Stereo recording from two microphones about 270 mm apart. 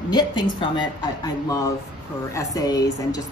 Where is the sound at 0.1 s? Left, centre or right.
Centre.